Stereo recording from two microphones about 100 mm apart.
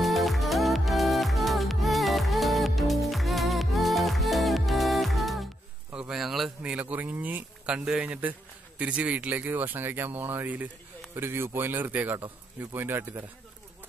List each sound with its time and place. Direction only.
0.0 s music: centre (ahead or behind)
5.9 s a sound: 5° right (ahead or behind)
6.6 s a man's voice: 15° right (ahead or behind)